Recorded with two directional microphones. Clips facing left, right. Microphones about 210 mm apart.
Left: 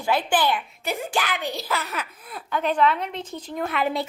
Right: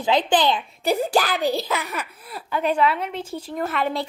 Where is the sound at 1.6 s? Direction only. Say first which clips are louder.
Right 2 dB; 15° right (ahead or behind).